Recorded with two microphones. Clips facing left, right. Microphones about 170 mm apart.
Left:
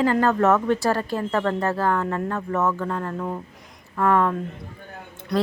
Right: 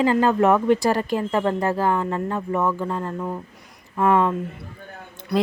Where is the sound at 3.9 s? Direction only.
20° right (ahead or behind).